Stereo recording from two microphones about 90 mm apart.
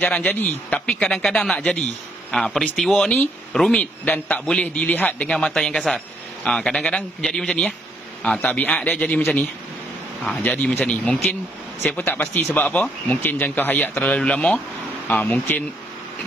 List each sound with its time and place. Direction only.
0.0 s speech: 15° left (ahead or behind)
3.0 s speech: 20° left (ahead or behind)
3.5 s speech: 5° left (ahead or behind)
3.8 s speech: 20° left (ahead or behind)